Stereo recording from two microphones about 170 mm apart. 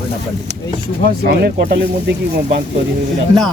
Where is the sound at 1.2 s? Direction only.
70° right (ahead or behind).